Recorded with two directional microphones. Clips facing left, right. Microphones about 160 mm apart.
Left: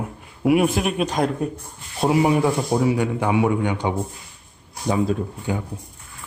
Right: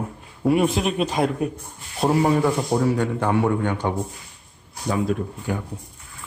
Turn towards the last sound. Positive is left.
turn(degrees=20)  # may be behind; listen again after turning